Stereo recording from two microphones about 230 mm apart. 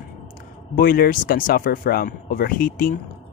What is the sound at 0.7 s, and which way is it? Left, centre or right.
Speech, left.